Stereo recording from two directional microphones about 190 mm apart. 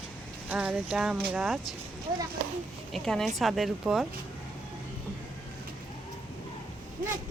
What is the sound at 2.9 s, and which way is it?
Speech, centre (ahead or behind).